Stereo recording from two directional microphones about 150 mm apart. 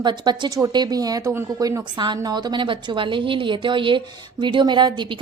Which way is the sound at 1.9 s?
30° right (ahead or behind).